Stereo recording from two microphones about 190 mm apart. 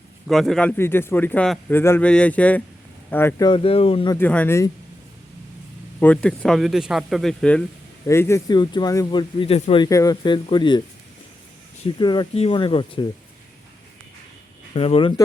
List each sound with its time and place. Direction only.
0.3 s speech: centre (ahead or behind)
0.8 s speech: 10° left (ahead or behind); by 4.1 s 30° left (ahead or behind)
4.1 s speech: 10° left (ahead or behind)
6.0 s speech: 5° left (ahead or behind); by 9.8 s 30° left (ahead or behind)
9.8 s speech: 20° left (ahead or behind)
11.9 s speech: 25° left (ahead or behind)
14.8 s speech: 30° left (ahead or behind)